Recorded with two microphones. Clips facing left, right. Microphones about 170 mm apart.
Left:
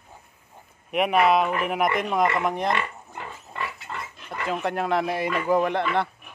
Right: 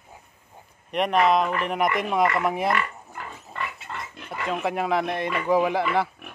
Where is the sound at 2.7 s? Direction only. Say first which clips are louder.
Right 1 dB; 25° left (ahead or behind).